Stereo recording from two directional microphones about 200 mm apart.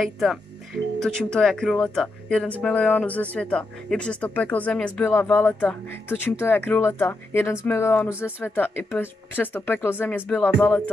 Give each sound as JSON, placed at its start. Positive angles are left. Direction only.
{"t": 0.0, "sound": "speech", "side_deg": 0}